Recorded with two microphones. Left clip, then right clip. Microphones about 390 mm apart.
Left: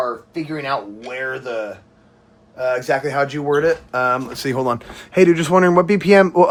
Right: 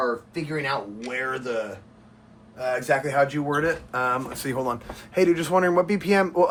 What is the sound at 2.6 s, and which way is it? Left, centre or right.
Speech, centre.